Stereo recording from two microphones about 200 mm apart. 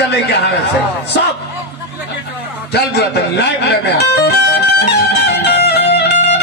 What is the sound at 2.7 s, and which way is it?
A man's voice, 55° left (ahead or behind).